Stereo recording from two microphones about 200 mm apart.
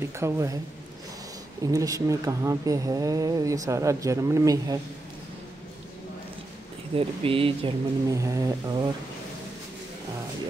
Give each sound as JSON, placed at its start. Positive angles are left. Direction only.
{"t": 0.2, "sound": "speech", "side_deg": -15}
{"t": 1.6, "sound": "speech", "side_deg": -15}
{"t": 7.0, "sound": "speech", "side_deg": -25}
{"t": 8.2, "sound": "speech", "side_deg": -15}